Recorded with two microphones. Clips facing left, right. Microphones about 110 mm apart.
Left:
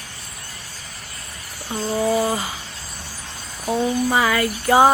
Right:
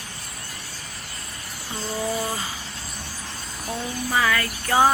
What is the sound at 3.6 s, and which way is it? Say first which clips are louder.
Speech: left 10 dB; 25° left (ahead or behind).